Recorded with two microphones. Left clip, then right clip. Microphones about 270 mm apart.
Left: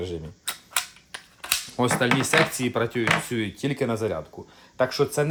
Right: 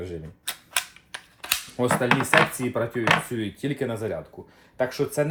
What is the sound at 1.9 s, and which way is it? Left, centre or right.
Chopping, centre.